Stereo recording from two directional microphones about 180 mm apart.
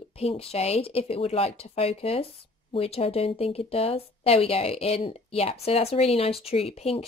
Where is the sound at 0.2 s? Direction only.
35° left (ahead or behind).